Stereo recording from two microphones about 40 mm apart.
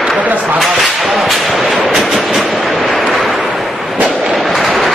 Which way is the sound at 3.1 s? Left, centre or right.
Centre.